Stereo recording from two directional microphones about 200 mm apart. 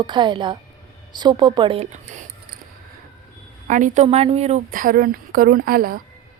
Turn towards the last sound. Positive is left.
turn(degrees=-45)  # may be behind; listen again after turning